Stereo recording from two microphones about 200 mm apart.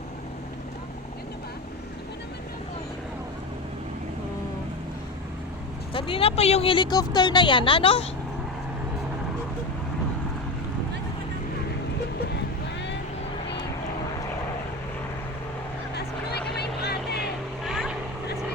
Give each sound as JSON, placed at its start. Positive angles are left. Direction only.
{"t": 5.9, "sound": "speech", "side_deg": 25}
{"t": 16.6, "sound": "vehicle", "side_deg": 55}
{"t": 17.7, "sound": "vehicle", "side_deg": 0}